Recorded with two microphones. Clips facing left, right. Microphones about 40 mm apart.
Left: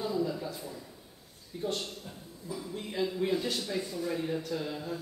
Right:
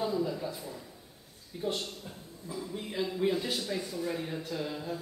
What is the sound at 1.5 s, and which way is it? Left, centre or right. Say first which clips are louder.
A man's voice: even; centre.